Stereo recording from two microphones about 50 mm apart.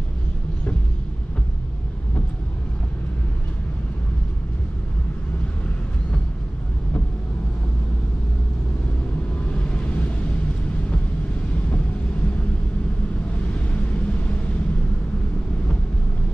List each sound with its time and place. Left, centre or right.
9.5 s vehicle: left
13.5 s vehicle: left